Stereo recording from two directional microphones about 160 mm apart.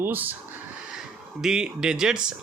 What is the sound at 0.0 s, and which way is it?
Speech, 10° right (ahead or behind).